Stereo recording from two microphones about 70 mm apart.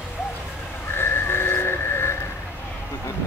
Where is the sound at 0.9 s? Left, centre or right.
Left.